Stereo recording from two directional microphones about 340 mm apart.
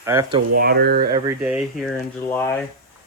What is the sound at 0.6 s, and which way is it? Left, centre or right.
Speech, right.